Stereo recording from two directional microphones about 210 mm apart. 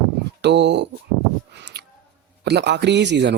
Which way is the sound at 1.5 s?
55° right (ahead or behind).